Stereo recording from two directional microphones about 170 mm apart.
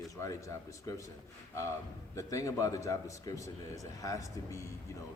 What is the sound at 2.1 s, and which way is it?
A man's voice, 20° left (ahead or behind).